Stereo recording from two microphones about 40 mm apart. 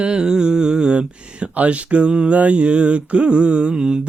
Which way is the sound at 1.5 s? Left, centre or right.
Right.